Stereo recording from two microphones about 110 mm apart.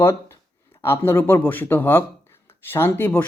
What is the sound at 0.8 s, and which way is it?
Speech, 20° left (ahead or behind).